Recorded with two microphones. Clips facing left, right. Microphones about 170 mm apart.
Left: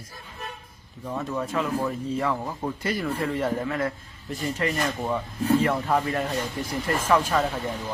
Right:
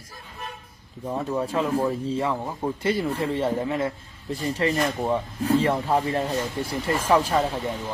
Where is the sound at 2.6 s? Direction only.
25° right (ahead or behind).